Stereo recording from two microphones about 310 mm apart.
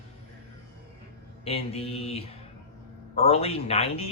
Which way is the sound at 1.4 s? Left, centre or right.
Centre.